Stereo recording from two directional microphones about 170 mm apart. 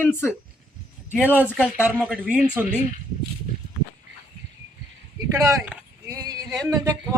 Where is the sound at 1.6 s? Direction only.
5° right (ahead or behind).